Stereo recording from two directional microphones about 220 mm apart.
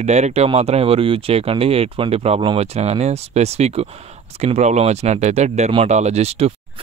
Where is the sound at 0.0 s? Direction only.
30° right (ahead or behind).